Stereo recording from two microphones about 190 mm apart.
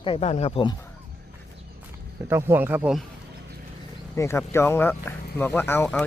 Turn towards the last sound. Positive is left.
turn(degrees=10)  # may be behind; listen again after turning